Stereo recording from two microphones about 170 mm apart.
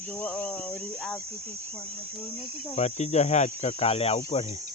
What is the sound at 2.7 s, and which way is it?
Speech, 40° left (ahead or behind).